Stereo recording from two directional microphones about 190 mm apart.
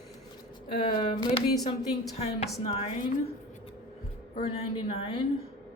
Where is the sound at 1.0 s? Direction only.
25° left (ahead or behind).